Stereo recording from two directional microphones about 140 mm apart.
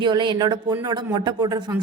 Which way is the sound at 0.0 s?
35° right (ahead or behind).